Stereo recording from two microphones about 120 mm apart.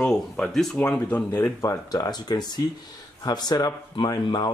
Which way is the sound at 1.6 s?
30° left (ahead or behind).